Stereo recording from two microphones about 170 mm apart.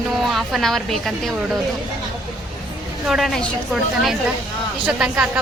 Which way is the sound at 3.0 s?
Centre (ahead or behind).